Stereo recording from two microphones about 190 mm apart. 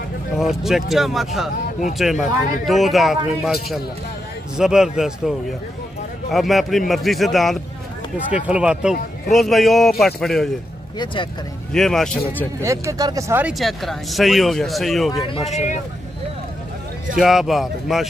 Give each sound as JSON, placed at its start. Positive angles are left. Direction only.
{"t": 0.4, "sound": "speech", "side_deg": 0}
{"t": 4.6, "sound": "speech", "side_deg": -5}
{"t": 6.3, "sound": "speech", "side_deg": 0}
{"t": 11.7, "sound": "speech", "side_deg": 0}
{"t": 12.6, "sound": "speech", "side_deg": -15}
{"t": 15.5, "sound": "speech", "side_deg": 35}
{"t": 17.2, "sound": "speech", "side_deg": 0}